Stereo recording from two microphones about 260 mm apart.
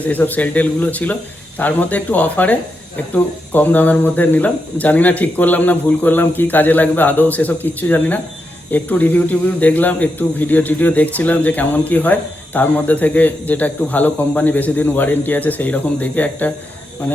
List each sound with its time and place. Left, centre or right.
0.1 s speech: centre